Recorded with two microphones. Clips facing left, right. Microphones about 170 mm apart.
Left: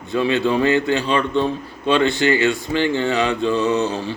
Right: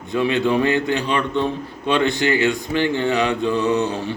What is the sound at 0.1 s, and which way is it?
A man's voice, 15° right (ahead or behind).